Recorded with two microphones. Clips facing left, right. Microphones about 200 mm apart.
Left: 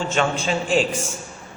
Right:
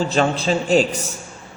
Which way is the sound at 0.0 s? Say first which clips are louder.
Right 3 dB; 35° right (ahead or behind).